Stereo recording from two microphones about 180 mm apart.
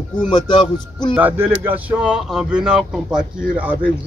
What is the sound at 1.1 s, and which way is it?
Speech, 10° right (ahead or behind).